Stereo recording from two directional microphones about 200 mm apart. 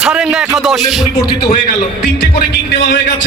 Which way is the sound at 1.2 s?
20° left (ahead or behind).